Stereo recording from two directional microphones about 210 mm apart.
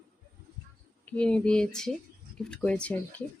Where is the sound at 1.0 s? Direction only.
5° left (ahead or behind).